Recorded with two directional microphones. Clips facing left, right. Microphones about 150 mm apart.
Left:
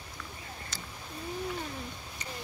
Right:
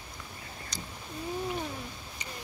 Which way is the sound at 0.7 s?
15° right (ahead or behind).